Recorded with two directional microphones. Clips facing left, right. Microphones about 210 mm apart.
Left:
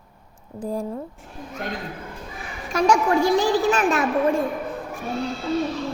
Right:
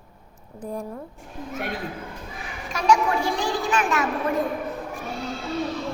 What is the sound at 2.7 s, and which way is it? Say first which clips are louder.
Speech: left 2 dB; 45° left (ahead or behind).